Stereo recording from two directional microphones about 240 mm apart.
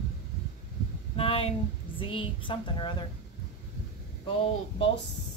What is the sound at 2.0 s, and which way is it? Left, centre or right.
Speech, left.